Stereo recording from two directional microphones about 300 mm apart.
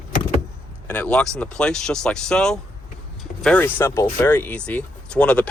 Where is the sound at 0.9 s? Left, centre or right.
Centre.